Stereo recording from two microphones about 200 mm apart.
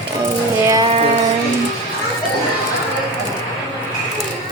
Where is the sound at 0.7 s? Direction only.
20° right (ahead or behind).